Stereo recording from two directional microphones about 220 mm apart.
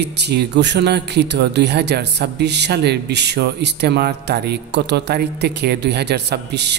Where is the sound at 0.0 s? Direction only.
50° right (ahead or behind).